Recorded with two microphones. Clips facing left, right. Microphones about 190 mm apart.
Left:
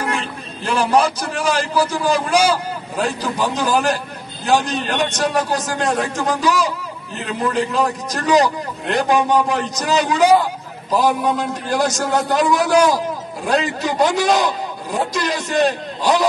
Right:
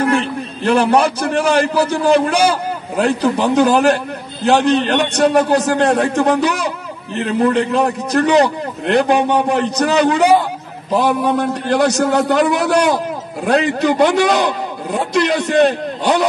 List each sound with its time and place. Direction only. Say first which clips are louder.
0.7 s a man's voice: right 4 dB; 60° right (ahead or behind)